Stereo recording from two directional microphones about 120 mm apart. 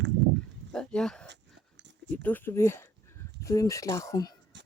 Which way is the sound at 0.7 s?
5° left (ahead or behind).